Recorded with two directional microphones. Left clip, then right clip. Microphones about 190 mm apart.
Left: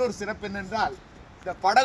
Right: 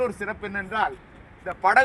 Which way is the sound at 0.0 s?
5° left (ahead or behind).